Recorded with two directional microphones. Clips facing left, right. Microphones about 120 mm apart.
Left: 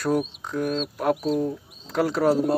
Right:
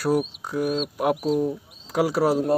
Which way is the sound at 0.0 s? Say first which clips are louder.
Right 1 dB; 10° right (ahead or behind).